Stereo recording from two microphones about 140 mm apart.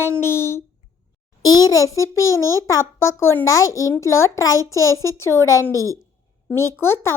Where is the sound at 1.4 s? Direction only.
30° left (ahead or behind).